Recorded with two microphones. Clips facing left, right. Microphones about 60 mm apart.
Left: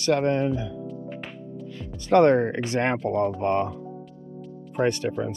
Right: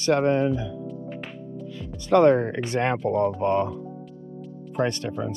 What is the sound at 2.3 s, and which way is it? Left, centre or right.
Speech, left.